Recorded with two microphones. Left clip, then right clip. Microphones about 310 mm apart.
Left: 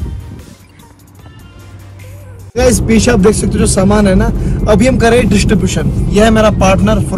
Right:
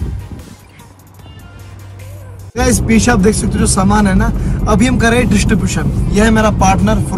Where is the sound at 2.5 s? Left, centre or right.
Centre.